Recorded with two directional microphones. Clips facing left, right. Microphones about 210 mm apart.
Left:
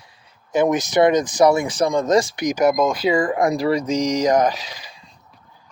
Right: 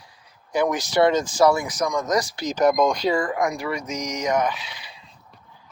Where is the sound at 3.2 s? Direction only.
30° left (ahead or behind).